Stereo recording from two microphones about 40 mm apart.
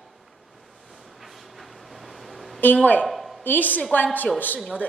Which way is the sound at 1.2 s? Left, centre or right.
Centre.